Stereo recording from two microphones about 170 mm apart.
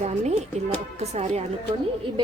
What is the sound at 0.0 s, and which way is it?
Music, 40° right (ahead or behind).